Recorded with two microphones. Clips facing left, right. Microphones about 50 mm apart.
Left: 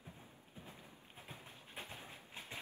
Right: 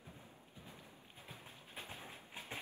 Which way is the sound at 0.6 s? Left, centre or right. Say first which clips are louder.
Left 2 dB; left.